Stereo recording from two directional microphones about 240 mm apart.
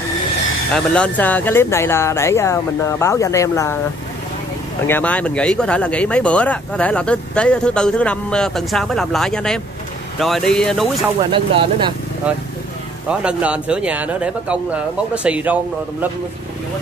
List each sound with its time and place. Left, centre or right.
0.7 s speech: centre
4.8 s speech: centre
11.3 s speech: right
13.1 s speech: centre